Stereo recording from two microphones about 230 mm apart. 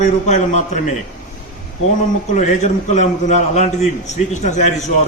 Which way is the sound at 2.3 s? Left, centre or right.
Left.